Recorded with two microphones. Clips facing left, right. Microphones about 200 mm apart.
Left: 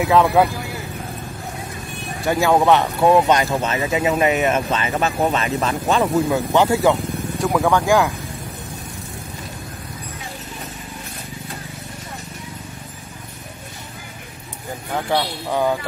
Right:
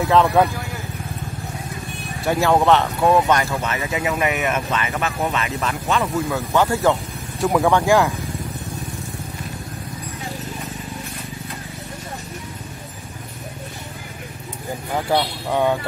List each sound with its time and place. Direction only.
2.2 s speech: 5° left (ahead or behind)
2.7 s speech: 15° left (ahead or behind); by 6.3 s 35° left (ahead or behind)
6.3 s speech: 15° left (ahead or behind)
7.3 s speech: centre (ahead or behind)
15.0 s speech: centre (ahead or behind)